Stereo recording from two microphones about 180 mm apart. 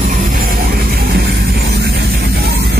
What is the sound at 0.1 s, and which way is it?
Music, 45° right (ahead or behind).